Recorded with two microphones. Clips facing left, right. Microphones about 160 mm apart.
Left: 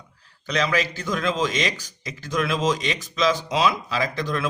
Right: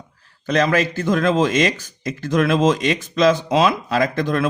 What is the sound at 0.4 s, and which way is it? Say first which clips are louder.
Speech: right 6 dB; 50° right (ahead or behind).